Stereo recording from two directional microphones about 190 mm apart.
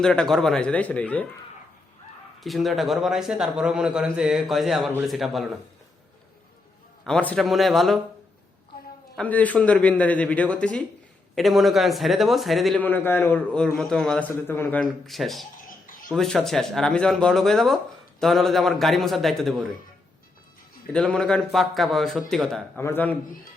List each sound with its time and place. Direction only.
0.0 s speech: 5° left (ahead or behind)
2.4 s speech: centre (ahead or behind)
7.0 s speech: 5° left (ahead or behind)
9.1 s a man's voice: 10° left (ahead or behind)
15.5 s a sound: 45° left (ahead or behind)
16.0 s speech: centre (ahead or behind)
20.9 s speech: 5° left (ahead or behind)